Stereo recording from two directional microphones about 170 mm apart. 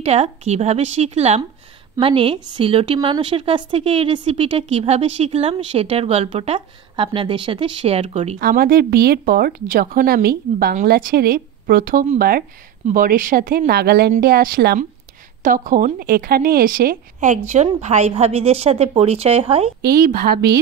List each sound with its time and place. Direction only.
0.0 s a woman's voice: 40° right (ahead or behind)
8.4 s speech: 60° right (ahead or behind)
15.4 s a woman's voice: 50° right (ahead or behind); by 19.7 s 35° right (ahead or behind)
19.8 s speech: 60° right (ahead or behind)